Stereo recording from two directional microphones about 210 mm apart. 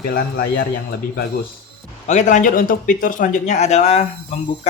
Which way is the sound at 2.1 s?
35° left (ahead or behind).